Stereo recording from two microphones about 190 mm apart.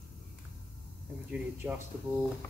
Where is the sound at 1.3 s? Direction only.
10° right (ahead or behind).